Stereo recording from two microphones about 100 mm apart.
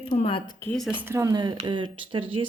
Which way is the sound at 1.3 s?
50° right (ahead or behind).